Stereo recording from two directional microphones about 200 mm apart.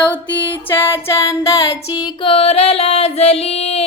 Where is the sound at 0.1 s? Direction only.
10° left (ahead or behind).